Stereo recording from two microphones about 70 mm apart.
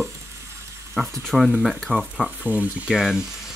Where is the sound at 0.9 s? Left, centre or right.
Centre.